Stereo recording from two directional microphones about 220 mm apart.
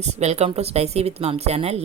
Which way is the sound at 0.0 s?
30° right (ahead or behind).